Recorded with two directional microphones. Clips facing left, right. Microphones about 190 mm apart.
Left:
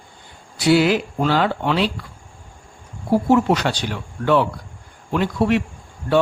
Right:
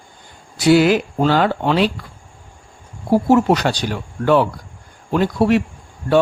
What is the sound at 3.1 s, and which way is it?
A man's voice, 40° right (ahead or behind).